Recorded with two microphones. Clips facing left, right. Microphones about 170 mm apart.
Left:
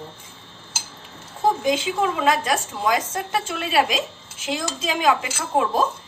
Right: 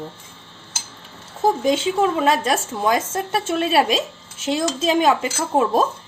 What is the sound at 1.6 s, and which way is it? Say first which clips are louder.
A woman's voice: right 3 dB; 25° right (ahead or behind).